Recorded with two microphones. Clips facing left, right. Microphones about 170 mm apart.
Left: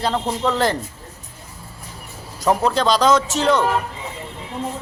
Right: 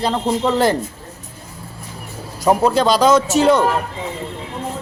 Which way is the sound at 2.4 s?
10° right (ahead or behind).